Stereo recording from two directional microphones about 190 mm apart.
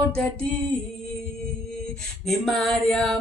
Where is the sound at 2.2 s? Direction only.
Centre (ahead or behind).